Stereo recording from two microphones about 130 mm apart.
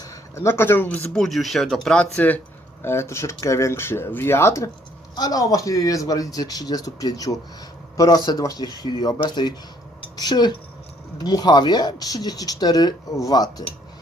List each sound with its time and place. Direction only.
0.0 s speech: 20° left (ahead or behind)